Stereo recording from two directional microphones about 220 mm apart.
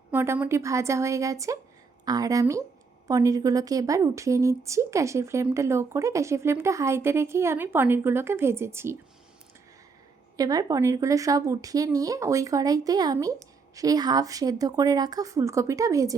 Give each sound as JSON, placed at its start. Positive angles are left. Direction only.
{"t": 0.1, "sound": "a woman's voice", "side_deg": -10}
{"t": 10.3, "sound": "a woman's voice", "side_deg": -15}